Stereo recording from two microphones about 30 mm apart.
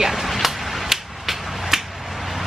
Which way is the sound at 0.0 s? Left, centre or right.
Centre.